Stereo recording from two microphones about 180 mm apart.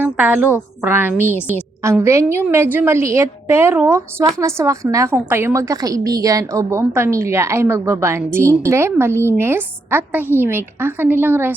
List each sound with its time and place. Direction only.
0.0 s a woman's voice: 10° right (ahead or behind)